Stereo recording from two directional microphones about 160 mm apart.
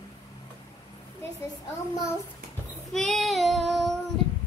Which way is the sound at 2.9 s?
Centre (ahead or behind).